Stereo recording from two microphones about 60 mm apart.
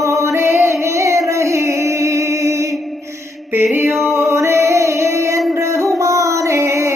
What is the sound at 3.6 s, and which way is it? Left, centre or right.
Music, right.